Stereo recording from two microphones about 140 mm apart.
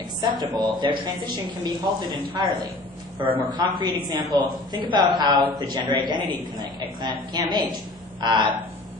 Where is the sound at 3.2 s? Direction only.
40° right (ahead or behind).